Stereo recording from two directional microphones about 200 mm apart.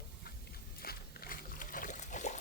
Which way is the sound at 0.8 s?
50° left (ahead or behind).